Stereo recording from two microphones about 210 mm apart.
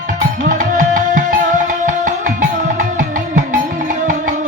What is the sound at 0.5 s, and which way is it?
Music, 40° right (ahead or behind).